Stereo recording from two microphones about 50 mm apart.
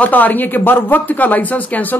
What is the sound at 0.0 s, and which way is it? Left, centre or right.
A woman's voice, left.